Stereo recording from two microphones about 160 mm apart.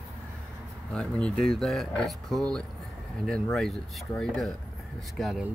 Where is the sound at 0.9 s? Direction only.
5° left (ahead or behind).